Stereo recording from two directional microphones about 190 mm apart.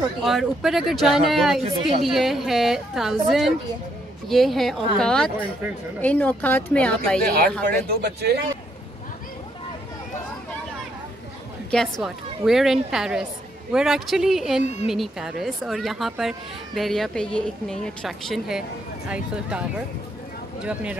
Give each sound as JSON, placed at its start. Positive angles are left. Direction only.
{"t": 0.2, "sound": "speech", "side_deg": 0}
{"t": 1.6, "sound": "speech", "side_deg": -30}
{"t": 2.0, "sound": "a woman's voice", "side_deg": 0}
{"t": 7.2, "sound": "speech", "side_deg": -50}
{"t": 11.7, "sound": "speech", "side_deg": 0}
{"t": 14.6, "sound": "a woman's voice", "side_deg": 35}
{"t": 14.9, "sound": "speech", "side_deg": -5}
{"t": 20.6, "sound": "speech", "side_deg": -5}